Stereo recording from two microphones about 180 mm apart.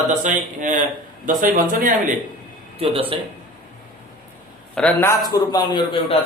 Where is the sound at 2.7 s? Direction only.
30° right (ahead or behind).